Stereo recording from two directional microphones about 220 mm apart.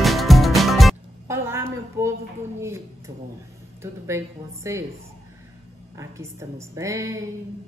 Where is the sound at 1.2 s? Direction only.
10° right (ahead or behind).